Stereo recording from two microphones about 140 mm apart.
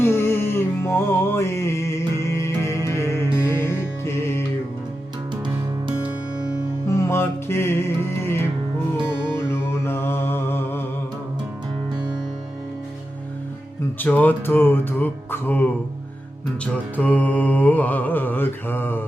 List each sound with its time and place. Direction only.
0.0 s music: 15° left (ahead or behind)
6.8 s music: 20° left (ahead or behind)
9.5 s music: 15° left (ahead or behind)
14.0 s mantra: 10° left (ahead or behind)
17.0 s mantra: 10° left (ahead or behind)